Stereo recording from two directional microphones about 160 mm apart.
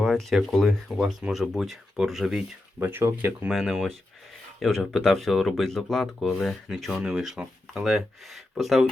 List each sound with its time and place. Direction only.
0.0 s speech: centre (ahead or behind)
2.8 s speech: 15° right (ahead or behind)
3.5 s speech: centre (ahead or behind)